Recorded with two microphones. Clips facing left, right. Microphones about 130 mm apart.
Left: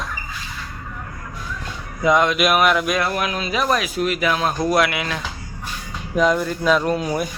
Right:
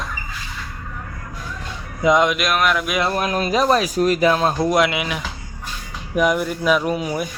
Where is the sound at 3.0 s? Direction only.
35° right (ahead or behind); by 5.2 s 15° right (ahead or behind).